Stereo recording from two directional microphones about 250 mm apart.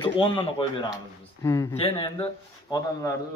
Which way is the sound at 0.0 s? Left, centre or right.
Left.